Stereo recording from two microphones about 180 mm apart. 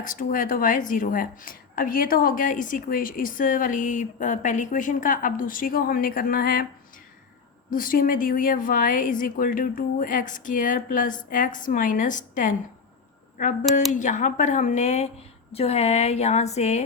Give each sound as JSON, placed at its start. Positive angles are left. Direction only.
{"t": 0.0, "sound": "a woman's voice", "side_deg": 50}
{"t": 7.7, "sound": "a woman's voice", "side_deg": 50}
{"t": 13.9, "sound": "a woman's voice", "side_deg": 45}